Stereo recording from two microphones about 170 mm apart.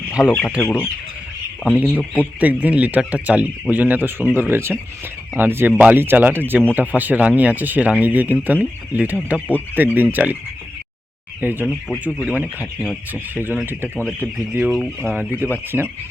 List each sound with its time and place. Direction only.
0.2 s speech: 10° left (ahead or behind)
1.7 s speech: 10° right (ahead or behind)
11.3 s speech: 10° right (ahead or behind)
11.6 s speech: 5° left (ahead or behind)
12.2 s speech: 10° right (ahead or behind)
12.8 s speech: 5° left (ahead or behind)
13.3 s speech: 10° right (ahead or behind)
14.7 s speech: 5° left (ahead or behind)
15.1 s speech: 10° right (ahead or behind)